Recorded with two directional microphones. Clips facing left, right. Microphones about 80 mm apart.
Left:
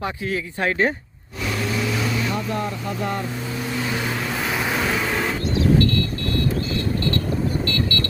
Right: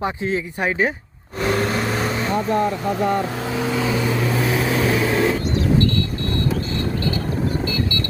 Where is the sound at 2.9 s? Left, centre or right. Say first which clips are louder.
Right 6 dB; right.